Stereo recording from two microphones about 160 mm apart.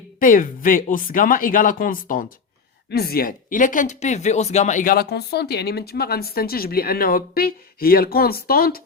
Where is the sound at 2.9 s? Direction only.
80° left.